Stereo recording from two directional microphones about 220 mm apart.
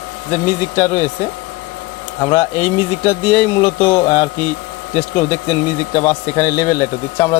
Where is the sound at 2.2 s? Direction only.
15° left (ahead or behind).